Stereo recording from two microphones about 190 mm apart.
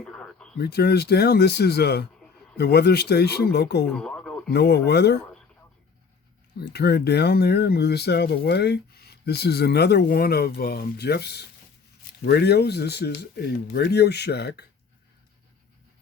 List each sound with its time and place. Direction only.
0.0 s a sound: 5° left (ahead or behind)
0.6 s speech: 55° left (ahead or behind)
3.8 s radio: 5° left (ahead or behind)
4.5 s speech: 60° left (ahead or behind)
6.6 s speech: 60° left (ahead or behind)